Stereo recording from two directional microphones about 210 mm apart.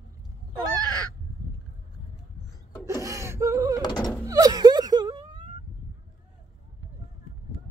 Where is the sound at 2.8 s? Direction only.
15° right (ahead or behind).